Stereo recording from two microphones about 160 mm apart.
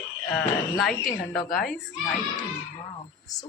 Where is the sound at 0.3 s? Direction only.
Centre (ahead or behind).